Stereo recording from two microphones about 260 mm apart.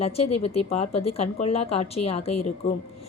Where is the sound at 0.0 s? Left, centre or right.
Left.